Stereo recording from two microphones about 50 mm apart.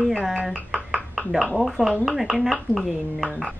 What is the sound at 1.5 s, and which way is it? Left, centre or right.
A woman's voice, centre.